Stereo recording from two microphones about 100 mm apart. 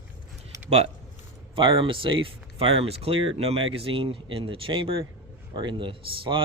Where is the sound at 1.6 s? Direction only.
60° right (ahead or behind).